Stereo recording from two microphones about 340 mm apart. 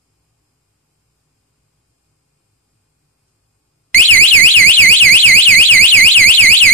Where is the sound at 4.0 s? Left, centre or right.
Centre.